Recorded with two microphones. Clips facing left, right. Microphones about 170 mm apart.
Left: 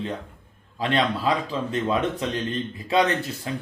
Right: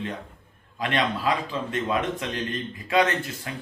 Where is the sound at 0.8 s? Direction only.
30° left (ahead or behind).